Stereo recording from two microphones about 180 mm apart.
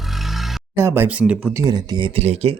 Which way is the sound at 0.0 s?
Centre (ahead or behind).